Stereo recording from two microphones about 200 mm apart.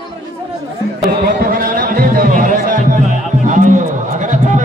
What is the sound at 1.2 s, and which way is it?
Music, 50° right (ahead or behind).